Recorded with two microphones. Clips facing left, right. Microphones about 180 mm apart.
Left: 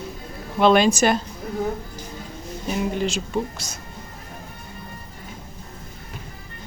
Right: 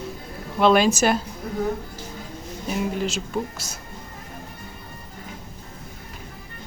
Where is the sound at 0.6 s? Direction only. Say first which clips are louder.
Left 1 dB; 5° right (ahead or behind).